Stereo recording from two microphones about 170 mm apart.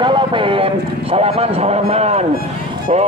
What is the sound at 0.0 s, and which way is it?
A man's voice, 30° right (ahead or behind).